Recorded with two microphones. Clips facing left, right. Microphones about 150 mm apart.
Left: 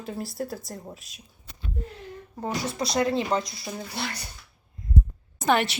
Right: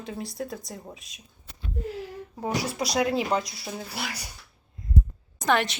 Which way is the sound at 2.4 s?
10° right (ahead or behind).